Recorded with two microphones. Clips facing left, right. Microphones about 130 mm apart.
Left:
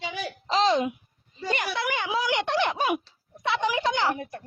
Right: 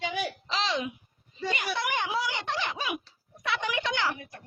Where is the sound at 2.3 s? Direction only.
65° left (ahead or behind).